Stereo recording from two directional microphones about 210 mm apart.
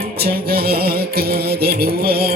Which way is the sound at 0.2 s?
50° right (ahead or behind).